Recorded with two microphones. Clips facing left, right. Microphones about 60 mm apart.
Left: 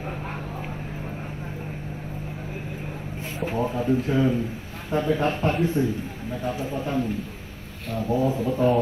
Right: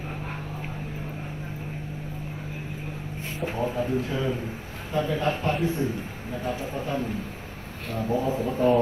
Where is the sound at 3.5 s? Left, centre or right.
Left.